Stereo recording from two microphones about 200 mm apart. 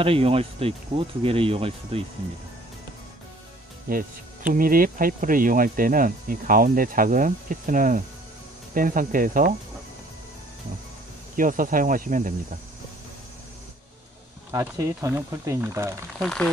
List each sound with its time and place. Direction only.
0.0 s speech: 30° right (ahead or behind)
3.9 s speech: 45° right (ahead or behind)
11.3 s speech: 40° right (ahead or behind)
14.5 s speech: 15° right (ahead or behind)
16.2 s speech: 5° left (ahead or behind)